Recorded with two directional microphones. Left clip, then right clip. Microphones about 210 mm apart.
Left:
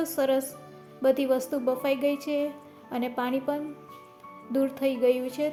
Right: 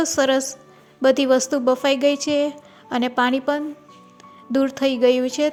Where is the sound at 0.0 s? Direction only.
25° right (ahead or behind).